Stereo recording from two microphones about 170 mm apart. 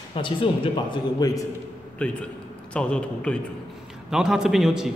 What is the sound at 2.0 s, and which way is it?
A man's voice, 10° left (ahead or behind).